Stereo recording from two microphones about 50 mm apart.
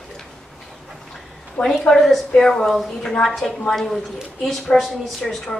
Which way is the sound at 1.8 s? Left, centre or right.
Centre.